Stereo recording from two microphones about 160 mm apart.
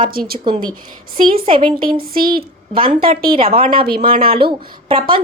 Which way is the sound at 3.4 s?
35° right (ahead or behind).